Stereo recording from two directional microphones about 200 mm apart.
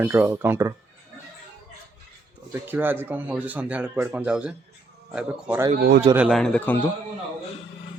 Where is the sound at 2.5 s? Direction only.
10° right (ahead or behind); by 6.9 s 10° left (ahead or behind).